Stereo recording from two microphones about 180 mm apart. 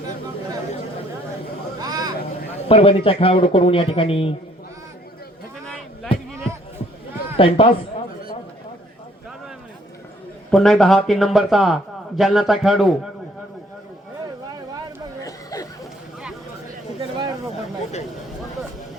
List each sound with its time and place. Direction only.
1.8 s vehicle: 20° right (ahead or behind)
2.6 s speech: 30° left (ahead or behind)
5.6 s a sound: 5° left (ahead or behind)
7.3 s a man's voice: 30° left (ahead or behind)
10.5 s a man's voice: centre (ahead or behind)
15.2 s chatter: 20° left (ahead or behind)
17.0 s a sound: 25° right (ahead or behind)